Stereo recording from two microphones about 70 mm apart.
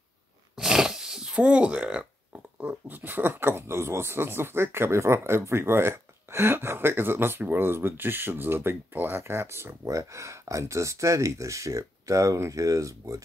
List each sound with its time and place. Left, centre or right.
0.6 s speech: centre; by 13.2 s right